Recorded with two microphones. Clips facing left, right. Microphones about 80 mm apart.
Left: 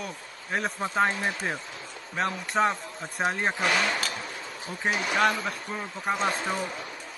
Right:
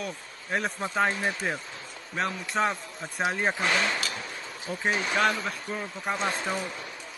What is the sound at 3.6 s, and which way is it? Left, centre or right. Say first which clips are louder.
Speech: left 2 dB; right.